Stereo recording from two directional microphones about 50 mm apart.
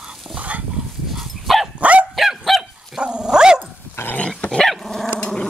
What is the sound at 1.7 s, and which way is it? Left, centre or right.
Dog, right.